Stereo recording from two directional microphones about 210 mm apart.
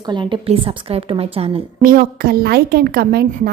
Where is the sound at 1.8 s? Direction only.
40° right (ahead or behind).